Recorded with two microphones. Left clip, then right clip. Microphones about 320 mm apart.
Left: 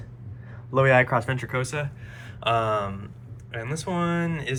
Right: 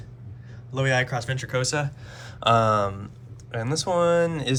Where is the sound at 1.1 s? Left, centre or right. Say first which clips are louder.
Left 2 dB; centre.